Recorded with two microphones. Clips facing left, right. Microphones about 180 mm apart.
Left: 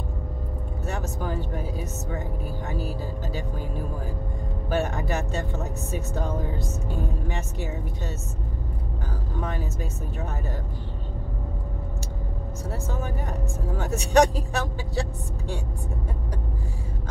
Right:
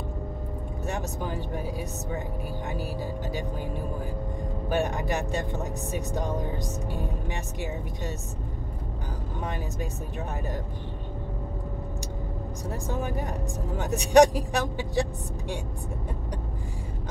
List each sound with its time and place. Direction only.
0.8 s speech: 15° right (ahead or behind)
2.7 s speech: 15° right (ahead or behind)
4.6 s speech: 15° right (ahead or behind)
9.4 s speech: 15° right (ahead or behind)
12.8 s speech: 15° right (ahead or behind)